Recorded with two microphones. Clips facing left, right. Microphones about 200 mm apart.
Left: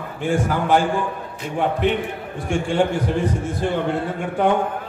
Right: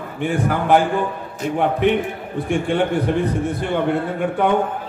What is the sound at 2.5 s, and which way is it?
Speech, 60° right (ahead or behind).